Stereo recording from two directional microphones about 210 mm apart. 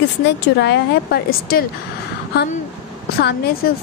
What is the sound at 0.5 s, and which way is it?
A woman's voice, 55° left (ahead or behind).